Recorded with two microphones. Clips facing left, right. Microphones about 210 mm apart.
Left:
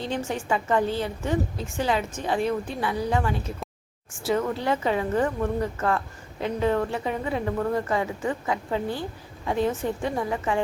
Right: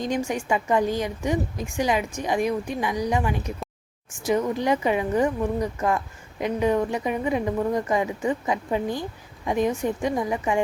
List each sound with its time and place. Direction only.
0.0 s a woman's voice: 15° right (ahead or behind)